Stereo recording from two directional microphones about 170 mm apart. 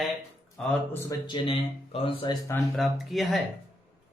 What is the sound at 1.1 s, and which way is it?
Speech, 30° left (ahead or behind).